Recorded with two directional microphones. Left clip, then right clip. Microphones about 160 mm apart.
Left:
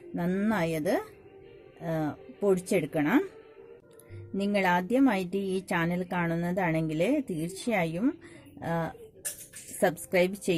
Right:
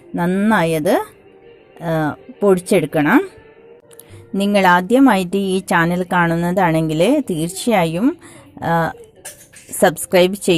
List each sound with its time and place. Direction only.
0.2 s a woman's voice: 15° right (ahead or behind)
4.4 s a woman's voice: 20° right (ahead or behind)